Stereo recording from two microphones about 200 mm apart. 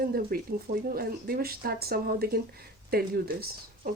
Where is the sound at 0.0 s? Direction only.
50° right (ahead or behind).